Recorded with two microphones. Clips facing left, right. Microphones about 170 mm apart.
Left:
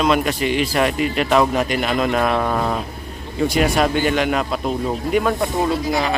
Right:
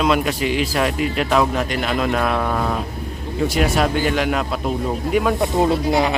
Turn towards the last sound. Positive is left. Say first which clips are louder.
# right 3 dB
turn(degrees=-25)  # may be behind; listen again after turning